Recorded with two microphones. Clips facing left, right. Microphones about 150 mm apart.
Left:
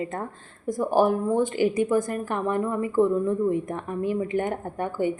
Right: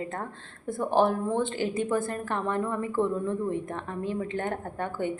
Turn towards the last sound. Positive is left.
turn(degrees=10)  # may be behind; listen again after turning